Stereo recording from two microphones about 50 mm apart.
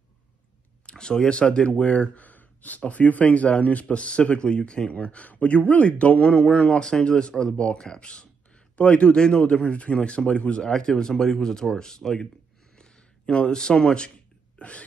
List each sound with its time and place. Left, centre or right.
0.8 s speech: centre
10.6 s speech: centre
12.7 s a sound: centre